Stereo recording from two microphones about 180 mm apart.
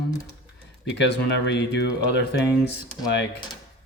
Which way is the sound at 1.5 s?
70° left (ahead or behind).